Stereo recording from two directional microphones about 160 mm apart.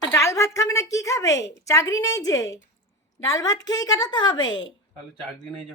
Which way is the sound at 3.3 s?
20° left (ahead or behind).